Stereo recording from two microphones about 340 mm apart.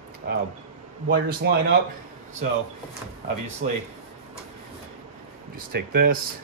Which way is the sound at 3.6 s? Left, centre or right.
Right.